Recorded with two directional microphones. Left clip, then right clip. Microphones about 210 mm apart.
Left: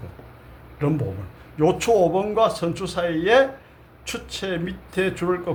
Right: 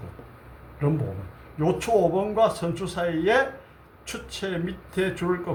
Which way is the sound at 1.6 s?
35° left (ahead or behind).